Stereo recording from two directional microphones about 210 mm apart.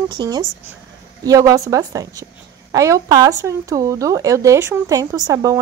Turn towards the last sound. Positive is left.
turn(degrees=-15)  # may be behind; listen again after turning